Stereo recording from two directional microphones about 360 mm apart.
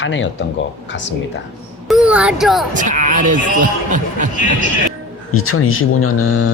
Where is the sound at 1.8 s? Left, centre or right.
Centre.